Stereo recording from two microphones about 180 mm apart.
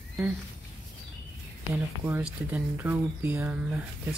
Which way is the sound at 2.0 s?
10° right (ahead or behind).